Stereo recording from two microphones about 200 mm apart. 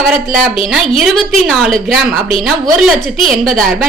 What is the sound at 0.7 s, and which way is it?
A woman's voice, centre (ahead or behind).